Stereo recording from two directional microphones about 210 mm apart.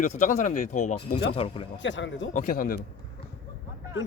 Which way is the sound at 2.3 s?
35° left (ahead or behind).